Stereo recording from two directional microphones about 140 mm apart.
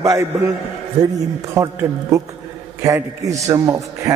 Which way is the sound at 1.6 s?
25° right (ahead or behind).